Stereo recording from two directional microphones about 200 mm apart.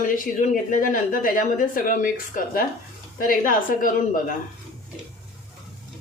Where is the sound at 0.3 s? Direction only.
40° left (ahead or behind).